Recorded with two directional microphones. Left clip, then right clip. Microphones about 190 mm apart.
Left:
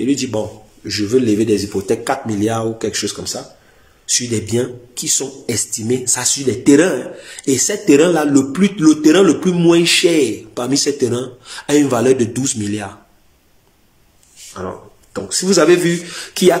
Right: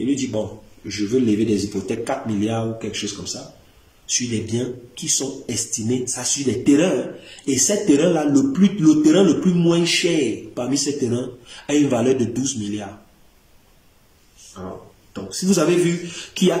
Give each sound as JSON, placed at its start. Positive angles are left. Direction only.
{"t": 0.0, "sound": "speech", "side_deg": -15}
{"t": 15.1, "sound": "speech", "side_deg": -15}